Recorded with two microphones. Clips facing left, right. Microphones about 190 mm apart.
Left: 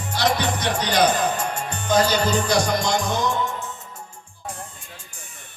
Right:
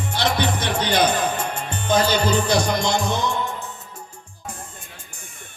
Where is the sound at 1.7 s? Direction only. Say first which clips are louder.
Even; 25° right (ahead or behind).